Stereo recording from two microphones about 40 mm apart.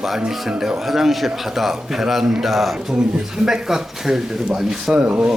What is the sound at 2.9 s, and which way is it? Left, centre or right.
Speech, centre.